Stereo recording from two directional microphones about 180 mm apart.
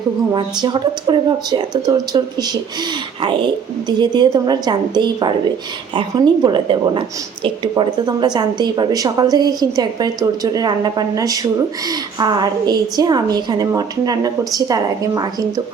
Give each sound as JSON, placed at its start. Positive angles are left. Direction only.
{"t": 0.3, "sound": "a woman's voice", "side_deg": -25}